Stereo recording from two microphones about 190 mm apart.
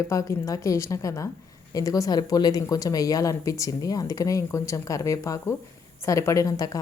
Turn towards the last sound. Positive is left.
turn(degrees=15)  # may be behind; listen again after turning